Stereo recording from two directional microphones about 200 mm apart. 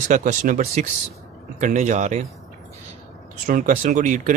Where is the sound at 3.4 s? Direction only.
40° right (ahead or behind).